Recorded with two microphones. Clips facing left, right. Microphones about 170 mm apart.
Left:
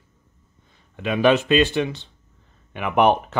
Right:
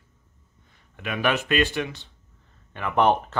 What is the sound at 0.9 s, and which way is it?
Speech, 25° left (ahead or behind).